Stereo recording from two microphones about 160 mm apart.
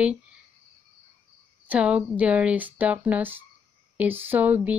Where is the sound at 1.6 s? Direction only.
10° right (ahead or behind).